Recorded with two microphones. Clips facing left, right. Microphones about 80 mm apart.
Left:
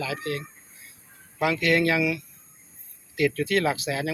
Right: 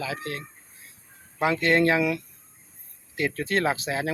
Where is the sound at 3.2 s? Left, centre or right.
Right.